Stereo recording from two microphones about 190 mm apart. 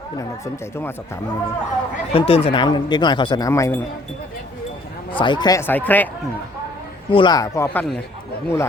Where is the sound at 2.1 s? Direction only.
30° left (ahead or behind).